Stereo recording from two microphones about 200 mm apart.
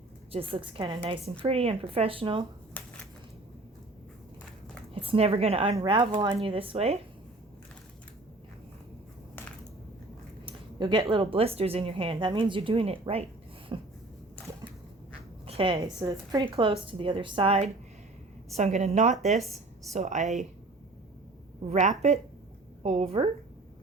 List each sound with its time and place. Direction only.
0.3 s a woman's voice: 30° right (ahead or behind)
2.8 s a sound: 10° left (ahead or behind)
4.9 s a woman's voice: 30° right (ahead or behind)
10.4 s speech: 25° right (ahead or behind)
15.4 s a sound: 25° right (ahead or behind)
15.8 s a woman's voice: 15° right (ahead or behind); by 20.5 s 35° right (ahead or behind)
21.7 s speech: 35° right (ahead or behind)